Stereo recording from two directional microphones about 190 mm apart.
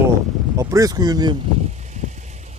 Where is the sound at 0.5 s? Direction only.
15° right (ahead or behind).